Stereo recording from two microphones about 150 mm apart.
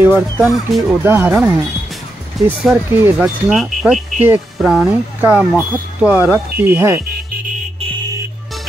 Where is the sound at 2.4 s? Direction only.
Centre (ahead or behind); by 7.0 s 15° right (ahead or behind).